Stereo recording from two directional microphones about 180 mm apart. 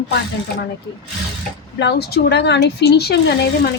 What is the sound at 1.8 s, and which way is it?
Speech, 65° left (ahead or behind).